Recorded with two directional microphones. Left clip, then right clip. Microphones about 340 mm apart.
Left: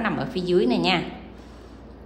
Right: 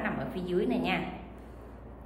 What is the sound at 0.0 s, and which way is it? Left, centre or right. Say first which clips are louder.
A woman's voice: left 8 dB; centre.